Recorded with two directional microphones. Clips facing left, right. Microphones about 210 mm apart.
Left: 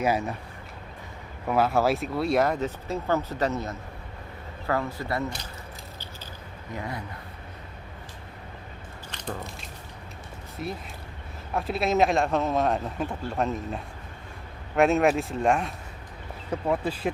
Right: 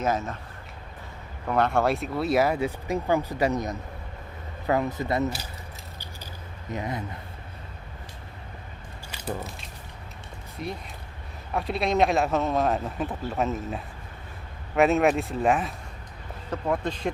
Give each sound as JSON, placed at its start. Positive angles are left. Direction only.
{"t": 0.0, "sound": "speech", "side_deg": 10}
{"t": 1.5, "sound": "speech", "side_deg": 5}
{"t": 6.7, "sound": "speech", "side_deg": -20}
{"t": 9.0, "sound": "biting", "side_deg": -5}
{"t": 10.6, "sound": "speech", "side_deg": 0}